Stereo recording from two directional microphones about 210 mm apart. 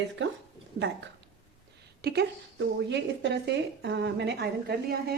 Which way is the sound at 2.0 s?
50° right (ahead or behind).